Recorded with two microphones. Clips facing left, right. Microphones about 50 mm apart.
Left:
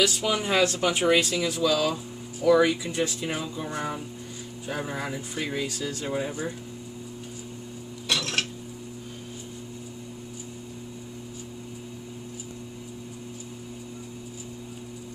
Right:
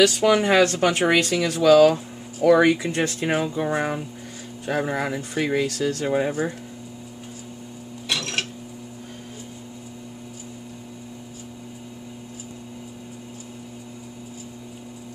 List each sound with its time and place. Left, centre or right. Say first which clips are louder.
0.0 s speech: right 7 dB; right
3.4 s speech: right 7 dB; right
8.1 s a sound: right 1 dB; centre